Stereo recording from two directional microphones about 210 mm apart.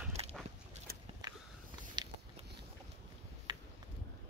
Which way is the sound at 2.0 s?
20° right (ahead or behind).